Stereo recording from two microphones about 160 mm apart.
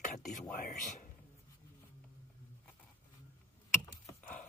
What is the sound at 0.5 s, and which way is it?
Speech, 50° left (ahead or behind).